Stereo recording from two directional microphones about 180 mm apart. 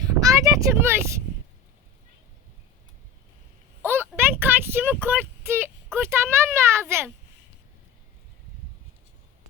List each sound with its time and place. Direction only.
0.0 s speech: 20° right (ahead or behind)
4.3 s speech: 10° right (ahead or behind)